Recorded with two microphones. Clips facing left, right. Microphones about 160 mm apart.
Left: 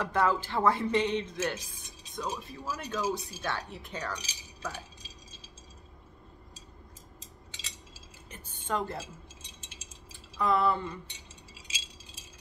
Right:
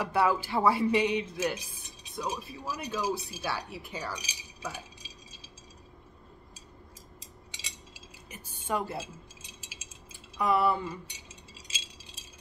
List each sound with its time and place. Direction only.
0.0 s speech: 10° right (ahead or behind)
7.5 s cutlery: 15° right (ahead or behind)
10.3 s speech: 10° right (ahead or behind)